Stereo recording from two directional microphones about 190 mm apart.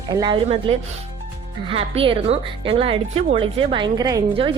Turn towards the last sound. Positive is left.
turn(degrees=-25)  # may be behind; listen again after turning